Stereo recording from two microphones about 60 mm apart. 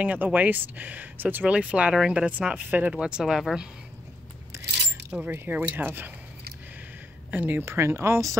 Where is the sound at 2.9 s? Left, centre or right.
Centre.